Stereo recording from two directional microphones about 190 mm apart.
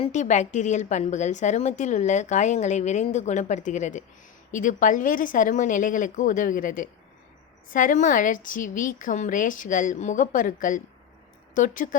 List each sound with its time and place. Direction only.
0.0 s a woman's voice: 40° left (ahead or behind)